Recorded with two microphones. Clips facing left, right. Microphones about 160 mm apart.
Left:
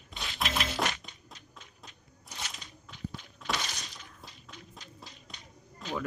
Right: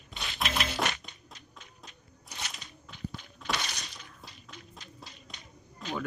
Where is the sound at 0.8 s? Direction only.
65° right (ahead or behind).